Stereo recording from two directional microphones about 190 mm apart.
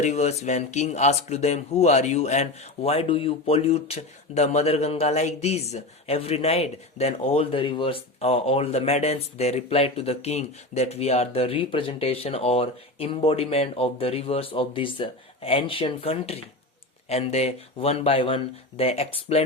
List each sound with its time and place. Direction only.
0.0 s speech: 35° left (ahead or behind)